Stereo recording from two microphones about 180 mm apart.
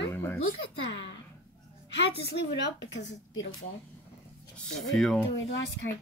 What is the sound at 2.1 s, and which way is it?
A woman's voice, 70° left (ahead or behind).